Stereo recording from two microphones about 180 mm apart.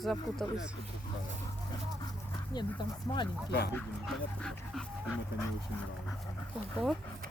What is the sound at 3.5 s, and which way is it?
Speech, 60° left (ahead or behind).